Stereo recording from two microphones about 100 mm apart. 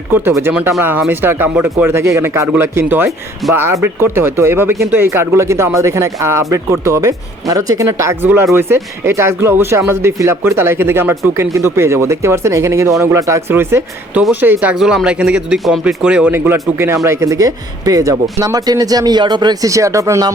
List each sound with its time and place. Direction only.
0.8 s speech: 20° right (ahead or behind)
14.8 s a man's voice: 5° right (ahead or behind)
16.3 s speech: 20° right (ahead or behind); by 19.7 s 45° right (ahead or behind)
19.7 s speech: 30° right (ahead or behind)